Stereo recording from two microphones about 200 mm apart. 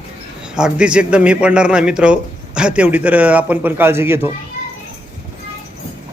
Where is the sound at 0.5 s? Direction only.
5° right (ahead or behind).